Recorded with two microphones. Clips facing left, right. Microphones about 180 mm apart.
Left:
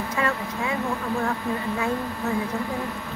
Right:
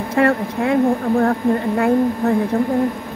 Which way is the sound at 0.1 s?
55° right (ahead or behind).